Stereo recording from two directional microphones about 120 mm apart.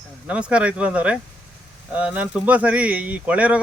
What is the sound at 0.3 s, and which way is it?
Speech, 10° right (ahead or behind).